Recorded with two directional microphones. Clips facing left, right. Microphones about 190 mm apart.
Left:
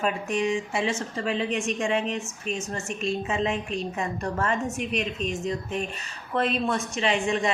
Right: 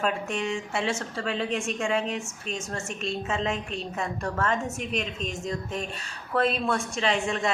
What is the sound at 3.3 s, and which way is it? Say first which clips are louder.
A woman's voice: left 2 dB; 5° left (ahead or behind).